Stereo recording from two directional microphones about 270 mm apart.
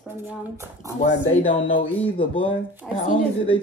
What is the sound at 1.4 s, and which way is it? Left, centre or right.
Speech, left.